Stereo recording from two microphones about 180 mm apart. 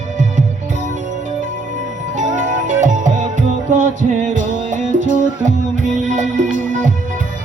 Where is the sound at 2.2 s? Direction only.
45° right (ahead or behind).